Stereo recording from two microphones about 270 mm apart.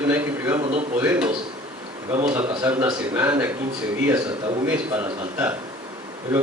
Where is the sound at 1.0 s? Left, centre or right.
Centre.